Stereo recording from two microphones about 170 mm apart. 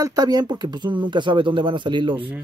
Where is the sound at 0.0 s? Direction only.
20° right (ahead or behind).